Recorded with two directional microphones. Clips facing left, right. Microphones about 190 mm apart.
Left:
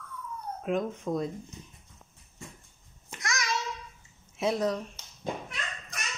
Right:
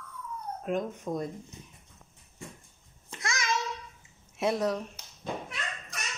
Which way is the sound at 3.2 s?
30° right (ahead or behind).